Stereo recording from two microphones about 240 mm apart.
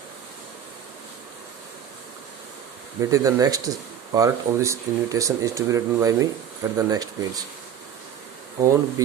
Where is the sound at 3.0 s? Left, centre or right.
Centre.